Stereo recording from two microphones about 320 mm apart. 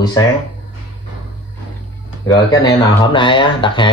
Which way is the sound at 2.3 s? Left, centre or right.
Centre.